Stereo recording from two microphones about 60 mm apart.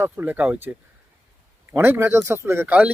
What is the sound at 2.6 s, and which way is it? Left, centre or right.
Speech, right.